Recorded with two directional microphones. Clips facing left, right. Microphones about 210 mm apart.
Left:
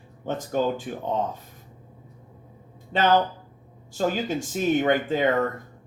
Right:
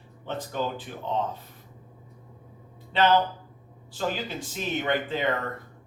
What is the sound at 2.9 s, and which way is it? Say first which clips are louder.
Speech: left 1 dB; 45° left (ahead or behind).